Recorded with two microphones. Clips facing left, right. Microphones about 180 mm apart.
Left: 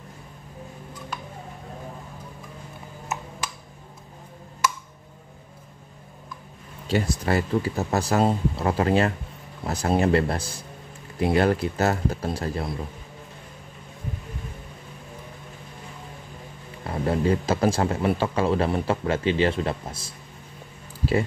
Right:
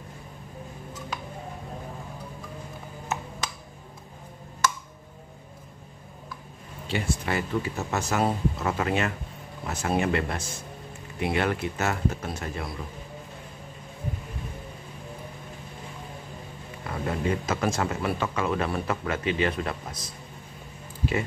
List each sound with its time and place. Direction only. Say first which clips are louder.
6.9 s speech: left 5 dB; 40° left (ahead or behind)
16.8 s speech: left 5 dB; 30° left (ahead or behind)